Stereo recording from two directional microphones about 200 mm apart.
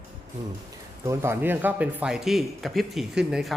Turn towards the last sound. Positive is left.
turn(degrees=0)  # may be behind; listen again after turning